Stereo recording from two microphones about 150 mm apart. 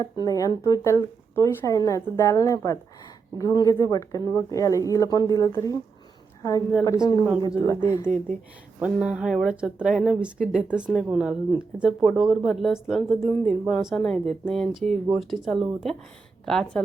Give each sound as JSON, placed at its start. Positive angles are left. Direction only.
{"t": 0.0, "sound": "speech", "side_deg": 25}
{"t": 6.8, "sound": "speech", "side_deg": 20}
{"t": 8.8, "sound": "speech", "side_deg": -5}
{"t": 13.1, "sound": "speech", "side_deg": 20}
{"t": 13.4, "sound": "speech", "side_deg": 0}